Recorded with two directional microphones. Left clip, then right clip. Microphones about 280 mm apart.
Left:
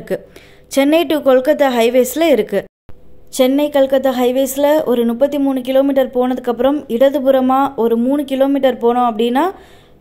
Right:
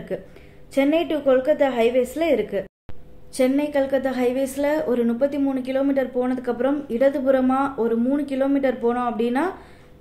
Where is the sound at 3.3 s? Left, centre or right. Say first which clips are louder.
Left 8 dB; left.